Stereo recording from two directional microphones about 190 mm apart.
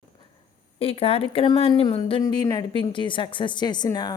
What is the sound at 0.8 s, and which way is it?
Speech, 30° left (ahead or behind).